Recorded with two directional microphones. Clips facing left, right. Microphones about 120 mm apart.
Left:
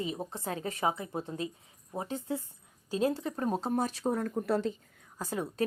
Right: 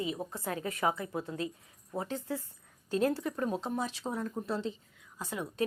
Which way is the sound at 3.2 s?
35° left (ahead or behind).